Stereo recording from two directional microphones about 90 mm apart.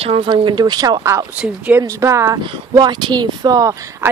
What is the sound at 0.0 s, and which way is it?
Speech, 90° right.